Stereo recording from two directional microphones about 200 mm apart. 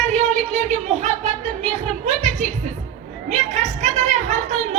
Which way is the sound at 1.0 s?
35° right (ahead or behind).